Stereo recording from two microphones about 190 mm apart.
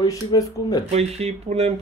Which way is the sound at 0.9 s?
35° right (ahead or behind).